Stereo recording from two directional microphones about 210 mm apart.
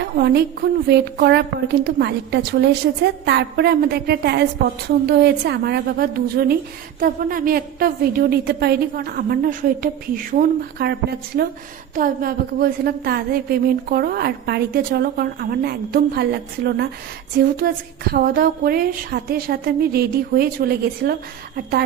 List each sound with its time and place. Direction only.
0.0 s a woman's voice: 50° right (ahead or behind)
11.9 s a woman's voice: 45° right (ahead or behind)